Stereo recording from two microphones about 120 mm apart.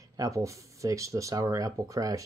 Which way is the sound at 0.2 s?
25° right (ahead or behind).